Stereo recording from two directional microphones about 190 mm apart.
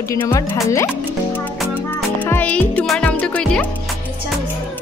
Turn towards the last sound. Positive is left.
turn(degrees=5)  # may be behind; listen again after turning